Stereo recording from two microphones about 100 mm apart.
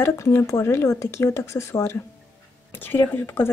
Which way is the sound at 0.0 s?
25° left (ahead or behind).